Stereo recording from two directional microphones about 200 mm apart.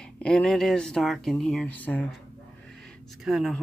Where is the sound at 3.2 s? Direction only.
Centre (ahead or behind).